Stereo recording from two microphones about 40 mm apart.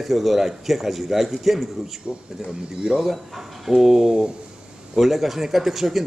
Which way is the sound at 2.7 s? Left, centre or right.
Right.